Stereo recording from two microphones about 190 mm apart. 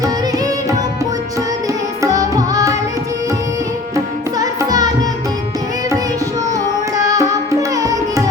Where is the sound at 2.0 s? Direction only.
20° right (ahead or behind).